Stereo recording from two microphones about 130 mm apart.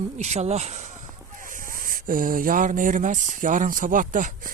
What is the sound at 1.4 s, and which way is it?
Speech, 90° right.